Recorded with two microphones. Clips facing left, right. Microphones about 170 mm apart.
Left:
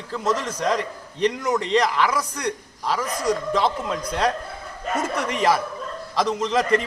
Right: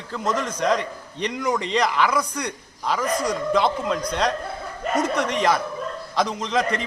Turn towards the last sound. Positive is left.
turn(degrees=0)  # may be behind; listen again after turning